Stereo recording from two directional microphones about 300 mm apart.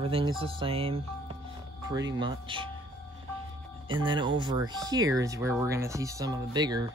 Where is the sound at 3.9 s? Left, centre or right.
Centre.